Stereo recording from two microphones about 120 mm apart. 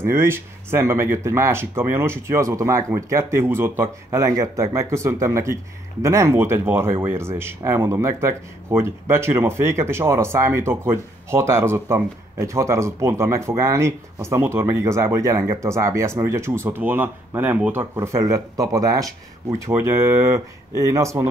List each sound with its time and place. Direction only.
0.0 s speech: 20° right (ahead or behind)
17.9 s speech: 25° right (ahead or behind)